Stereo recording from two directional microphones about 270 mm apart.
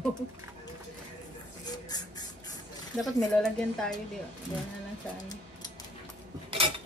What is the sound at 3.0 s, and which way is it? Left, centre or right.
Speech, centre.